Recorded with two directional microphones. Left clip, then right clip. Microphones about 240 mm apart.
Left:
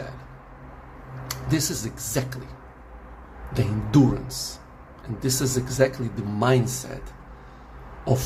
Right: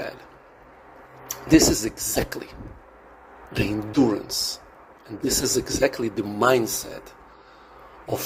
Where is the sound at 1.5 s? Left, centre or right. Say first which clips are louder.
Right 10 dB; right.